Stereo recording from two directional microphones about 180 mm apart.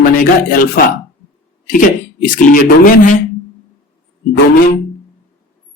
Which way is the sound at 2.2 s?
45° left (ahead or behind).